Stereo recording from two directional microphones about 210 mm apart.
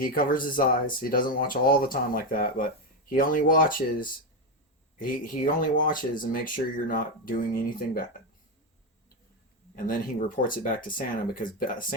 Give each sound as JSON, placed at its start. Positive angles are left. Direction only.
{"t": 0.0, "sound": "speech", "side_deg": 40}
{"t": 9.7, "sound": "speech", "side_deg": 40}